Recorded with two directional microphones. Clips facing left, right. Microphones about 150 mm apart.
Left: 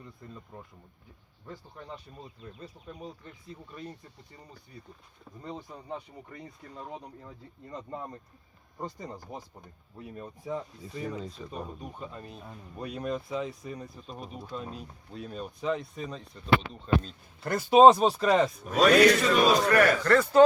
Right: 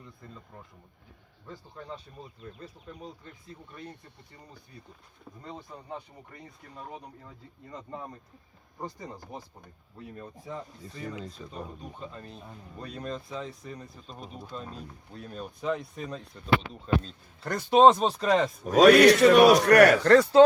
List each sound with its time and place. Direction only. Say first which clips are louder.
2.8 s speech: left 1 dB; 5° left (ahead or behind)
10.8 s speech: left 3 dB; 10° left (ahead or behind)
11.1 s speech: left 2 dB; 5° right (ahead or behind)
11.5 s speech: left 2 dB; 15° left (ahead or behind)
17.4 s speech: left 1 dB; 5° left (ahead or behind)
18.6 s speech: right 5 dB; 40° right (ahead or behind)
18.9 s speech: right 4 dB; 70° right (ahead or behind)
20.1 s speech: right 4 dB; 35° right (ahead or behind)